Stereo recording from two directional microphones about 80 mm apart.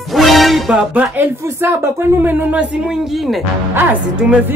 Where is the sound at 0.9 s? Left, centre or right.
Centre.